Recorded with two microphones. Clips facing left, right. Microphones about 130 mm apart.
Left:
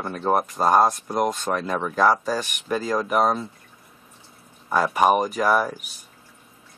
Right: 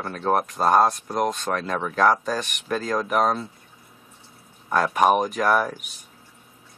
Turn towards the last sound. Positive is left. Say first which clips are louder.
# even
turn(degrees=0)  # may be behind; listen again after turning